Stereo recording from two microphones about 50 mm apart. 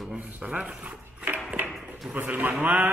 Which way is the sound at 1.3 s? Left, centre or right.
Right.